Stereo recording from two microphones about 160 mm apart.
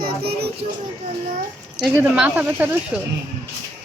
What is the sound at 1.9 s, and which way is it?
Speech, 10° right (ahead or behind).